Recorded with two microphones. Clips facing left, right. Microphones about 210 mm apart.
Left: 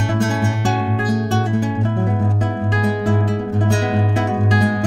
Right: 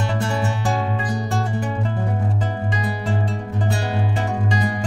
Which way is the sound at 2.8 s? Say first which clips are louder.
Left 9 dB; 65° left (ahead or behind).